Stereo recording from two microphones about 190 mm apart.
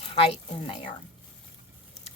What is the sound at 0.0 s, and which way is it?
Speech, 30° left (ahead or behind).